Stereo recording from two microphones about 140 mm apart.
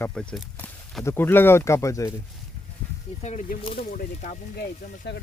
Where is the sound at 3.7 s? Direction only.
80° left.